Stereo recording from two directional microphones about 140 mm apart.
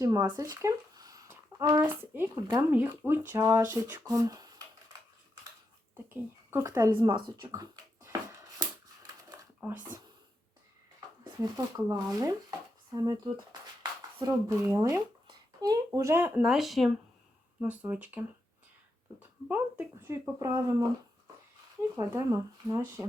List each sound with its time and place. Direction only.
0.0 s speech: 25° right (ahead or behind)
1.3 s a sound: 25° right (ahead or behind)
1.8 s a child's voice: 15° right (ahead or behind)
6.1 s speech: 20° right (ahead or behind)
9.6 s speech: 15° right (ahead or behind)
11.2 s a child's voice: 25° right (ahead or behind); by 16.9 s centre (ahead or behind)
17.6 s speech: 15° right (ahead or behind)
19.5 s a child's voice: 15° right (ahead or behind)
21.9 s a child's voice: 25° right (ahead or behind)